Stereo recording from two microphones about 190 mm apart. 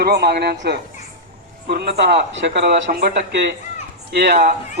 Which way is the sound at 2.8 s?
55° right (ahead or behind).